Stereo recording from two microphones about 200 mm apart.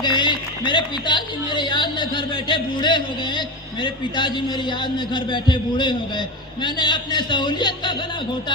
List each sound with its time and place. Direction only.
0.0 s speech: 20° left (ahead or behind)